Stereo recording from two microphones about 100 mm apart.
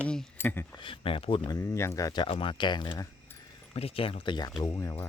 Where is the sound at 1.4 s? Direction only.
30° left (ahead or behind).